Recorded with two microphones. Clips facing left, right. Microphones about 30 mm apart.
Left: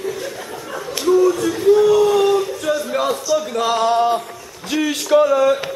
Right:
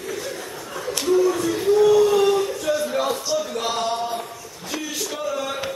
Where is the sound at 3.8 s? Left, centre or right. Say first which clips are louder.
Left 12 dB; left.